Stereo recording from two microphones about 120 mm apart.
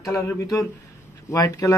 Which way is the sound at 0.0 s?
25° left (ahead or behind).